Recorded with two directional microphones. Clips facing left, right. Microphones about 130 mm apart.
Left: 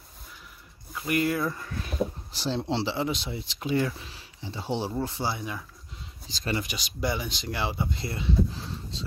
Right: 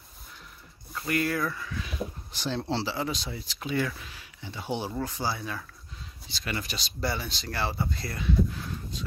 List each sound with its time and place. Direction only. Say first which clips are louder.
0.9 s speech: left 2 dB; 20° left (ahead or behind)
1.5 s speech: left 1 dB; 45° left (ahead or behind)
2.6 s speech: left 2 dB; 20° left (ahead or behind)